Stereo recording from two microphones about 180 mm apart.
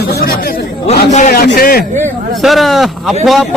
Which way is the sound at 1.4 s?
60° left (ahead or behind).